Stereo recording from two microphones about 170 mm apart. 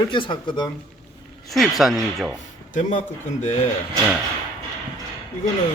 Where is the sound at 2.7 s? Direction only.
45° left (ahead or behind).